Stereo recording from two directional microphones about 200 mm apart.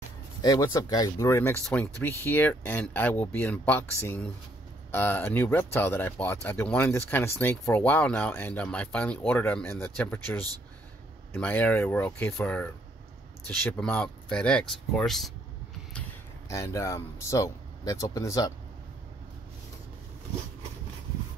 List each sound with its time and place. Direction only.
0.4 s speech: 20° left (ahead or behind); by 15.3 s centre (ahead or behind)
16.4 s speech: 15° left (ahead or behind)